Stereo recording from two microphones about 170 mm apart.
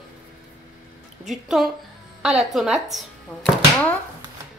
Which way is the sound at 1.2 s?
Centre (ahead or behind).